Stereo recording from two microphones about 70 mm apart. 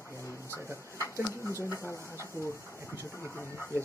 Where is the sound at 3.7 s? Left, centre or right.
Right.